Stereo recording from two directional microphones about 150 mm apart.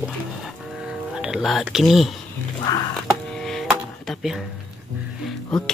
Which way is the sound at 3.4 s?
5° left (ahead or behind).